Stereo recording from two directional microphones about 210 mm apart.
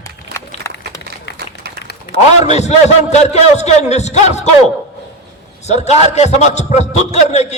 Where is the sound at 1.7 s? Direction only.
50° right (ahead or behind).